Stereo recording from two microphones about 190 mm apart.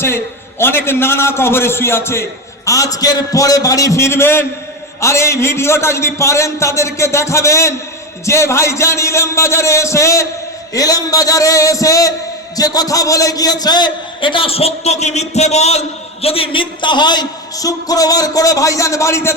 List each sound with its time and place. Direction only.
0.6 s a man's voice: 10° left (ahead or behind)